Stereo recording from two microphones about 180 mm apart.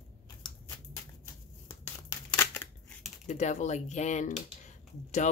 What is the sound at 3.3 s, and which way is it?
Speech, 40° left (ahead or behind).